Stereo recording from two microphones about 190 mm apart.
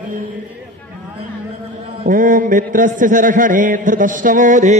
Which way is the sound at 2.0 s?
45° right (ahead or behind).